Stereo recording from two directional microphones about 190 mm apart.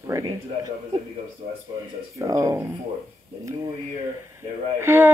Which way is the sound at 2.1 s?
15° right (ahead or behind).